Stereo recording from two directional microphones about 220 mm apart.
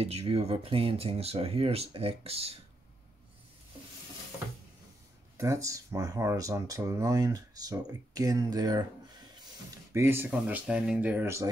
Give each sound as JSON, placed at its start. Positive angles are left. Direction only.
{"t": 0.0, "sound": "speech", "side_deg": -25}
{"t": 5.4, "sound": "speech", "side_deg": -15}
{"t": 9.9, "sound": "speech", "side_deg": -10}